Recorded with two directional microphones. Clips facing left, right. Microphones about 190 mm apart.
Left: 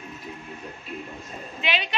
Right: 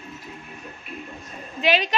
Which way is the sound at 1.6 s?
40° right (ahead or behind).